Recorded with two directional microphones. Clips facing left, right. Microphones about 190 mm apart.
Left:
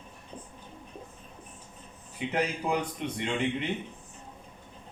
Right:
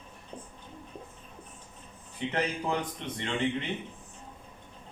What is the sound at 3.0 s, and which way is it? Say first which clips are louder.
Speech: left 4 dB; 10° left (ahead or behind).